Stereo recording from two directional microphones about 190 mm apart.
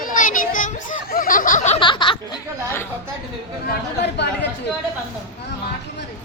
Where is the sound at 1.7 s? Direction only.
25° left (ahead or behind).